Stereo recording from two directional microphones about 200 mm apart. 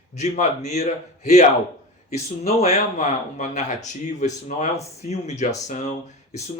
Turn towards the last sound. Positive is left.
turn(degrees=35)  # may be behind; listen again after turning